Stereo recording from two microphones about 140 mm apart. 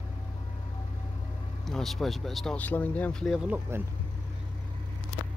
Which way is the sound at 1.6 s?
Centre (ahead or behind).